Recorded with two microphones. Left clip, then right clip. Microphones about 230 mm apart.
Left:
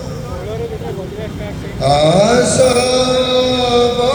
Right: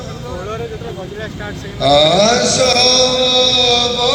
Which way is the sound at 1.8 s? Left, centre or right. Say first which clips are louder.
Right 1 dB; right.